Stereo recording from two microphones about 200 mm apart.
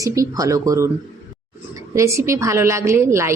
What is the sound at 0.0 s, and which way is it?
Speech, 15° right (ahead or behind).